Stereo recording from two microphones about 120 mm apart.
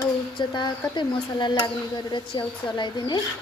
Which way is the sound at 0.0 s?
35° left (ahead or behind).